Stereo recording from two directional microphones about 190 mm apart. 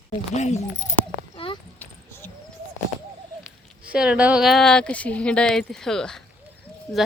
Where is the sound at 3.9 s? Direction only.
5° right (ahead or behind).